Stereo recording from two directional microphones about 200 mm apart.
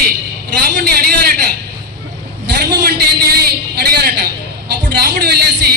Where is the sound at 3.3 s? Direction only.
50° right (ahead or behind).